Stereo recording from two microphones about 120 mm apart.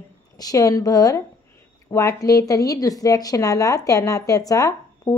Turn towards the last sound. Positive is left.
turn(degrees=30)  # may be behind; listen again after turning